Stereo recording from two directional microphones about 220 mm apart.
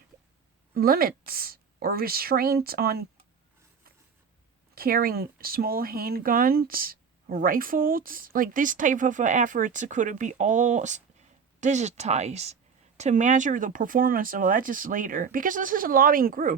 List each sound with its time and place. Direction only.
0.7 s a woman's voice: 45° right (ahead or behind)
4.7 s speech: 40° right (ahead or behind)